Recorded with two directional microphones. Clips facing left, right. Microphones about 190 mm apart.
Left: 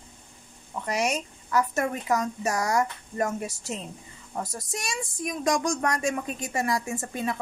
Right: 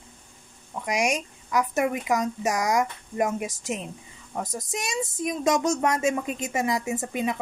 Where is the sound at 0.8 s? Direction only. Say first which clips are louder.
Right 2 dB; 15° right (ahead or behind).